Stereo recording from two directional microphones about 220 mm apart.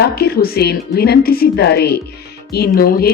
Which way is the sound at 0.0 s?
45° left (ahead or behind).